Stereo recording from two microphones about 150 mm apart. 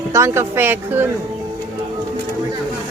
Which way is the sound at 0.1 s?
20° right (ahead or behind).